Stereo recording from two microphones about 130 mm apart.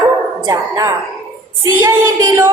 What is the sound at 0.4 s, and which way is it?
Speech, 30° right (ahead or behind).